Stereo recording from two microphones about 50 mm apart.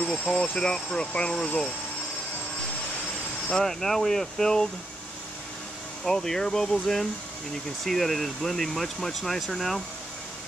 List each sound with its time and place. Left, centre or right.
0.0 s speech: centre
3.5 s speech: centre
6.0 s speech: centre